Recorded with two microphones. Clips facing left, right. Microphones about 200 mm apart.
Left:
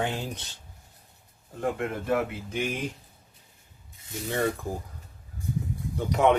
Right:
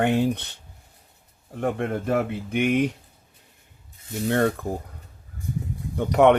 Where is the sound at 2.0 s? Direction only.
55° right (ahead or behind).